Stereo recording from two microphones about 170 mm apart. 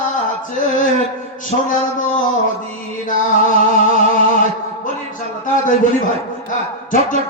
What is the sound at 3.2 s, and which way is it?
Music, 50° left (ahead or behind).